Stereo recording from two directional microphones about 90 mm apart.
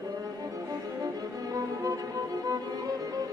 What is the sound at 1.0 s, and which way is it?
Music, 40° right (ahead or behind).